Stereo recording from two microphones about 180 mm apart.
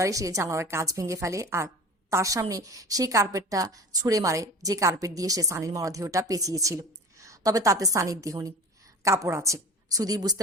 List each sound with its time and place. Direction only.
0.0 s a woman's voice: 20° right (ahead or behind)